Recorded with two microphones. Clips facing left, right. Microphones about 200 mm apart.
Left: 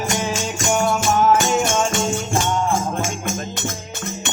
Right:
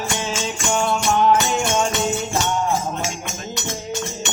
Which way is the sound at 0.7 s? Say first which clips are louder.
Left 1 dB; 5° left (ahead or behind).